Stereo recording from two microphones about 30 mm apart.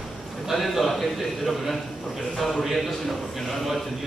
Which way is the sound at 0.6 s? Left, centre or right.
Centre.